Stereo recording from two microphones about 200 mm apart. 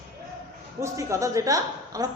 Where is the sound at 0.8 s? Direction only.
15° right (ahead or behind).